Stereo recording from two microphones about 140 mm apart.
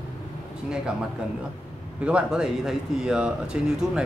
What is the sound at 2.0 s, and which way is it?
Speech, 5° right (ahead or behind).